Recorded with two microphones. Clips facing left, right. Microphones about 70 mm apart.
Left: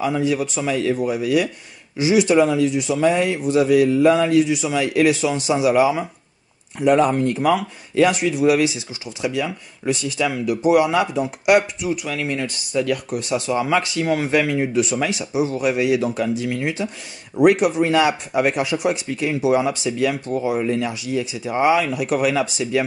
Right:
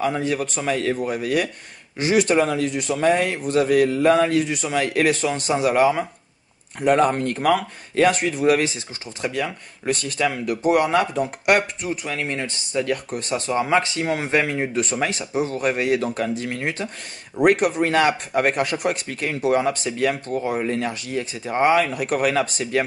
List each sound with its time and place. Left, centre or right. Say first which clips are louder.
0.0 s speech: left 2 dB; right
11.9 s speech: left 3 dB; right